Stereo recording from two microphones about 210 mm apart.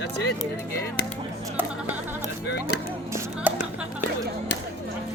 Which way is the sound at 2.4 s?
50° left (ahead or behind).